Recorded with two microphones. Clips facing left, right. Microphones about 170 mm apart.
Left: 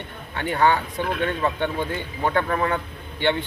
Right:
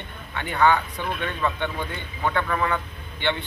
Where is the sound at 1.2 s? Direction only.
45° left (ahead or behind).